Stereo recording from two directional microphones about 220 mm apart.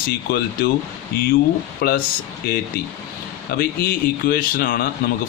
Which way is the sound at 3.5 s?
45° left (ahead or behind).